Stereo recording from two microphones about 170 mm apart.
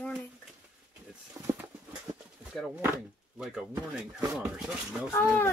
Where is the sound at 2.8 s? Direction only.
5° right (ahead or behind).